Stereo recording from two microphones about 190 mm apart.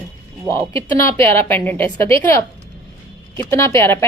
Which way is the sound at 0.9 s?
15° left (ahead or behind).